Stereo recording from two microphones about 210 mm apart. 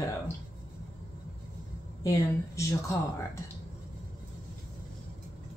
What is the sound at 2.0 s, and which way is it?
Speech, 15° left (ahead or behind).